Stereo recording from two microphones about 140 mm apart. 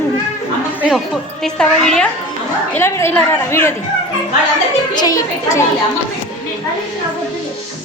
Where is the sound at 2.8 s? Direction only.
20° left (ahead or behind).